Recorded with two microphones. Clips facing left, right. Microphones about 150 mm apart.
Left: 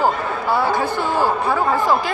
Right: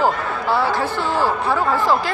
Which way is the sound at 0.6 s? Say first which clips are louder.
Left 1 dB; 15° left (ahead or behind).